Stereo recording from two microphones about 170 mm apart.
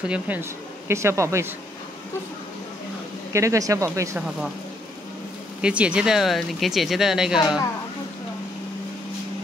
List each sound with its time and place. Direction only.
0.1 s speech: 10° right (ahead or behind)
3.3 s speech: 20° right (ahead or behind)
5.6 s speech: 5° right (ahead or behind)